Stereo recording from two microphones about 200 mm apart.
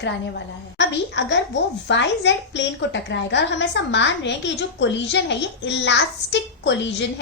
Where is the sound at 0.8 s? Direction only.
60° left (ahead or behind).